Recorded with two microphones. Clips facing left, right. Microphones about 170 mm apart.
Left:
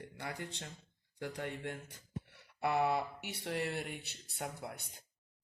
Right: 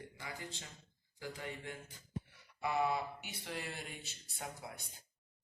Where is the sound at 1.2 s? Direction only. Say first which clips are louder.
Left 4 dB; 65° left (ahead or behind).